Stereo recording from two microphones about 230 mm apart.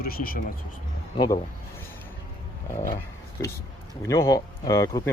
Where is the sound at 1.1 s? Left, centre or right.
Centre.